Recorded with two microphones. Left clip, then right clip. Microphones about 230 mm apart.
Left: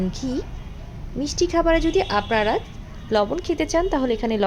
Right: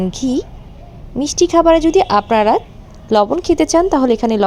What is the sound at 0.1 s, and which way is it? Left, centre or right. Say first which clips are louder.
A woman's voice: right 9 dB; right.